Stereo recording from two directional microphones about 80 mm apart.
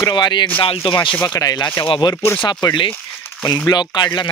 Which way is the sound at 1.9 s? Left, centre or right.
Left.